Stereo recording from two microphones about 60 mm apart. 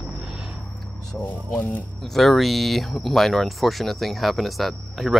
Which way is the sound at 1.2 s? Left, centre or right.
Left.